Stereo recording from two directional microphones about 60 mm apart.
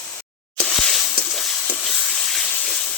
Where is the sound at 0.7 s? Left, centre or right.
Centre.